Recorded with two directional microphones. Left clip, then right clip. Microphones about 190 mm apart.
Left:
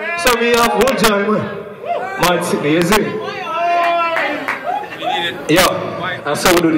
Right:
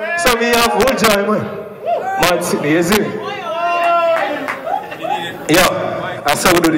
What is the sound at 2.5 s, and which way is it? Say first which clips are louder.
Speech: even; 30° right (ahead or behind).